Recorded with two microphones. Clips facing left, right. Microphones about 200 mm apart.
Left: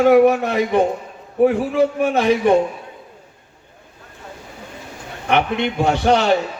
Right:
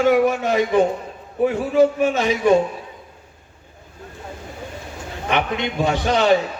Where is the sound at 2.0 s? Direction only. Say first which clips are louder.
Left 3 dB; 60° left (ahead or behind).